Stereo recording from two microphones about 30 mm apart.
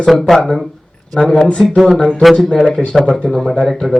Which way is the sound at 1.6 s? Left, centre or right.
Centre.